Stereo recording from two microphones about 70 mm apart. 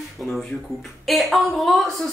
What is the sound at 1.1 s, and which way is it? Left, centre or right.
Speech, centre.